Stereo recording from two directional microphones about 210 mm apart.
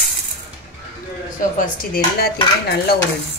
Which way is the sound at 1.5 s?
45° left (ahead or behind).